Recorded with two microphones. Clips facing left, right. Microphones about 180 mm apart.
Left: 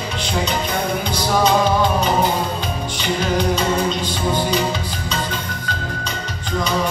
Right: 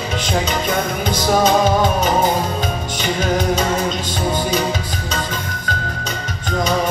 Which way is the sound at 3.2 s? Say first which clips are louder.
Right 1 dB; 45° right (ahead or behind).